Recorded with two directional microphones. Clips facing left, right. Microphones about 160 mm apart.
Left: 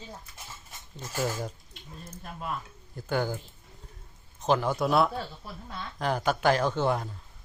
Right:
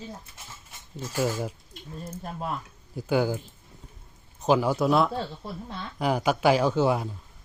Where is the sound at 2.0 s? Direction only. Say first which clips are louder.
Right 6 dB; 35° right (ahead or behind).